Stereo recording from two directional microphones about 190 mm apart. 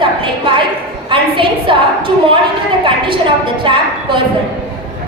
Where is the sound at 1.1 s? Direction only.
25° right (ahead or behind).